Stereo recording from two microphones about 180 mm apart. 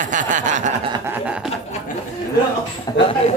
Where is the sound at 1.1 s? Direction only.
5° right (ahead or behind).